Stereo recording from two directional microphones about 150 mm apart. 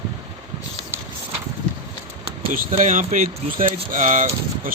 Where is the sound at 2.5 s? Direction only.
60° right (ahead or behind).